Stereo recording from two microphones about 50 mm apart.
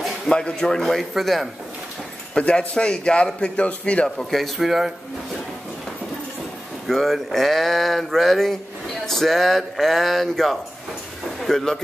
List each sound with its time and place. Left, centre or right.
0.3 s a man's voice: centre
2.3 s a man's voice: left
4.6 s speech: centre
6.9 s a man's voice: centre